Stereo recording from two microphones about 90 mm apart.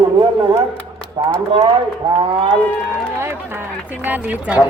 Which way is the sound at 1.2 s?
90° right.